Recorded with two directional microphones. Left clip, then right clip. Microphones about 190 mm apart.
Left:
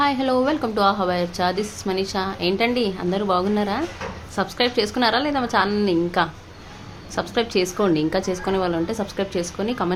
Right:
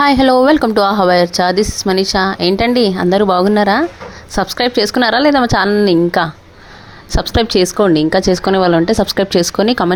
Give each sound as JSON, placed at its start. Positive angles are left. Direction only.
{"t": 0.0, "sound": "speech", "side_deg": -55}